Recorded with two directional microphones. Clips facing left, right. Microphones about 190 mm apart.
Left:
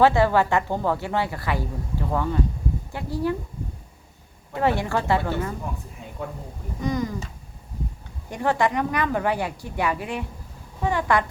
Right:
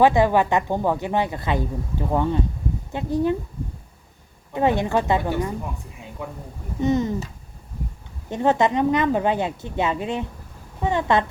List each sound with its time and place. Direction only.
0.0 s a woman's voice: 15° right (ahead or behind)
4.5 s a woman's voice: 20° right (ahead or behind)
6.0 s a sound: 15° right (ahead or behind)
6.8 s a woman's voice: 25° right (ahead or behind)
8.3 s a woman's voice: 20° right (ahead or behind)